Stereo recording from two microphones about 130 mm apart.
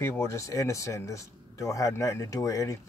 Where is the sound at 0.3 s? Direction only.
25° left (ahead or behind).